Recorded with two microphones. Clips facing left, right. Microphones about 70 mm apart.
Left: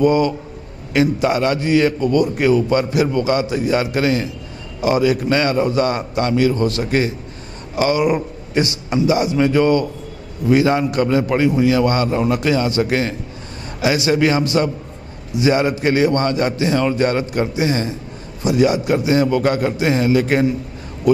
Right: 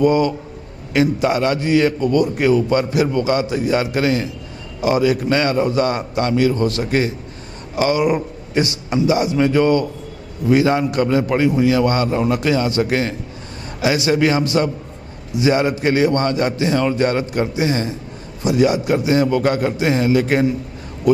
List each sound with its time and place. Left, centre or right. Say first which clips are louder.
0.0 s a man's voice: even; centre